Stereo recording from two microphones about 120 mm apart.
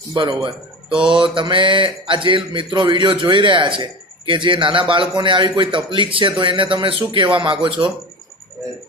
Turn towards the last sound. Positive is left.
turn(degrees=-45)  # may be behind; listen again after turning